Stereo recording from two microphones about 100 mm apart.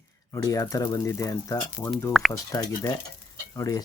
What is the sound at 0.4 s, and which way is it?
Speech, 35° left (ahead or behind).